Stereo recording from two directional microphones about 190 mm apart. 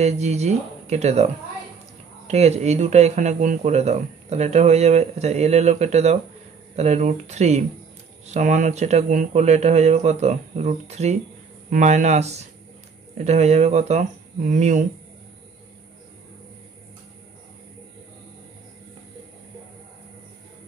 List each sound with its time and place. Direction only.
0.0 s speech: 35° right (ahead or behind)